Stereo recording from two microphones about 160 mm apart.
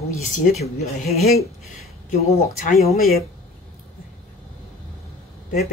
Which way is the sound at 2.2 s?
40° left (ahead or behind).